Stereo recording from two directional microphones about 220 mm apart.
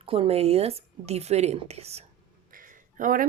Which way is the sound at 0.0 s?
25° right (ahead or behind).